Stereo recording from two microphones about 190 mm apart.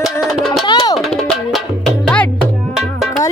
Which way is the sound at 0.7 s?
20° left (ahead or behind).